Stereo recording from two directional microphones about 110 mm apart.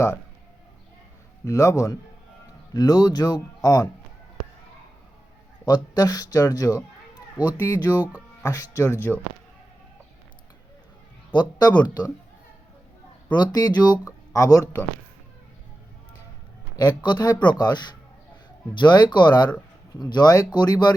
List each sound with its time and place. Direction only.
1.5 s speech: 30° left (ahead or behind)
5.6 s speech: 40° left (ahead or behind)
7.3 s speech: 15° right (ahead or behind)
8.4 s speech: 35° left (ahead or behind)
11.3 s speech: 45° left (ahead or behind)
13.3 s speech: 40° left (ahead or behind)
16.7 s speech: 40° left (ahead or behind)